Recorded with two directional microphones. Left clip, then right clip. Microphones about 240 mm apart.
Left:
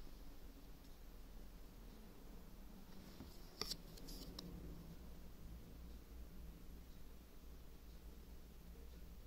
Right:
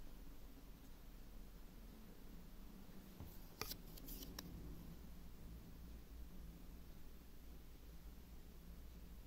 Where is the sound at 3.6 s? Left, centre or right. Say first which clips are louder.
Left 3 dB; centre.